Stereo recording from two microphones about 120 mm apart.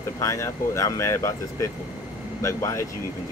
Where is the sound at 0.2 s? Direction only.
25° left (ahead or behind).